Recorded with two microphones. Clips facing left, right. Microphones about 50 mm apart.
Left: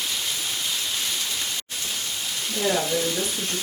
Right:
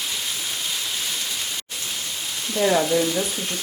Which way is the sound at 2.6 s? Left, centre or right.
Right.